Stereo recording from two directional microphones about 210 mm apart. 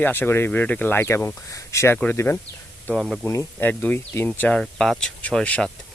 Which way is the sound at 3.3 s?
10° left (ahead or behind).